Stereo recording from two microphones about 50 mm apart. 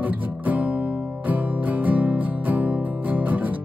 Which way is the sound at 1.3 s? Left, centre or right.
Right.